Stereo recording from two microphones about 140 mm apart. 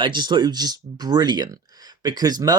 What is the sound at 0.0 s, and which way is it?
Speech, 30° right (ahead or behind).